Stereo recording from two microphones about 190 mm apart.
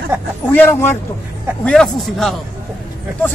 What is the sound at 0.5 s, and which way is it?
A man's voice, 10° left (ahead or behind).